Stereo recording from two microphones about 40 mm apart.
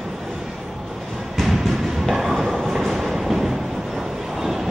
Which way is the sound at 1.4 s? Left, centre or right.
Centre.